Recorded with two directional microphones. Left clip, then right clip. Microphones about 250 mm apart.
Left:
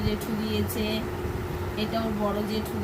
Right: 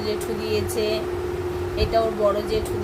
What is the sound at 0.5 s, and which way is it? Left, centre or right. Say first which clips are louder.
Speech: right 7 dB; right.